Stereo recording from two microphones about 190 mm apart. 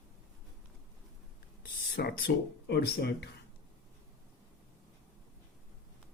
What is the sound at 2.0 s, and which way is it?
Speech, 50° left (ahead or behind).